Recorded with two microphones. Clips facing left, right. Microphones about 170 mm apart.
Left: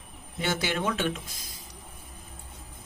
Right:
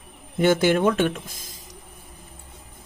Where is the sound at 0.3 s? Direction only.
50° right (ahead or behind).